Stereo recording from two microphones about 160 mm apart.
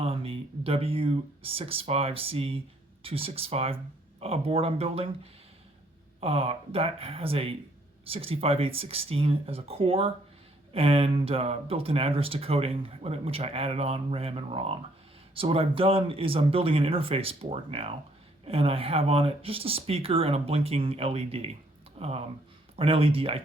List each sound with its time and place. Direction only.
0.0 s speech: 35° right (ahead or behind)